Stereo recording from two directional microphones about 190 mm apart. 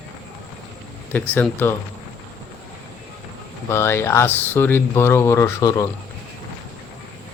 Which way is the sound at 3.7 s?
15° left (ahead or behind).